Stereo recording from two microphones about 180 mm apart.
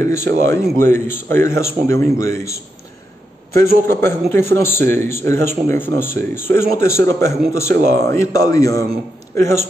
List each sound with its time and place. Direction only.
0.0 s speech: 15° left (ahead or behind)
3.8 s speech: 15° left (ahead or behind)